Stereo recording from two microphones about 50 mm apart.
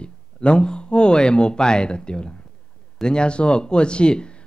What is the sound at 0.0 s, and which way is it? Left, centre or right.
Speech, centre.